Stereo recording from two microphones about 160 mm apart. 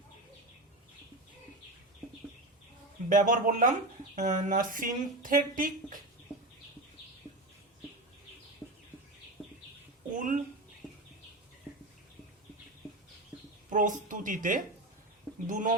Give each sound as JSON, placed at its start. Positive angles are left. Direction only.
{"t": 3.1, "sound": "speech", "side_deg": -55}
{"t": 10.2, "sound": "speech", "side_deg": -55}
{"t": 10.8, "sound": "a sound", "side_deg": 0}
{"t": 13.7, "sound": "speech", "side_deg": -55}